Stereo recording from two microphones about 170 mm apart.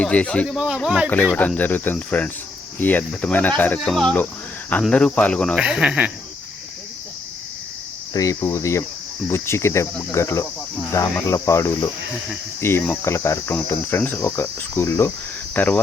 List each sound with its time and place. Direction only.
0.0 s cricket: 5° left (ahead or behind)
0.4 s speech: 5° right (ahead or behind)
1.1 s cricket: 10° left (ahead or behind)
5.5 s speech: 5° right (ahead or behind)
8.1 s cricket: 20° left (ahead or behind)